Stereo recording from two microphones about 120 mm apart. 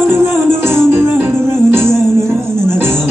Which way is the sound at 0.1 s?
20° right (ahead or behind).